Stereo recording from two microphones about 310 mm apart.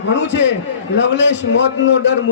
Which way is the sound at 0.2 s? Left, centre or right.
Left.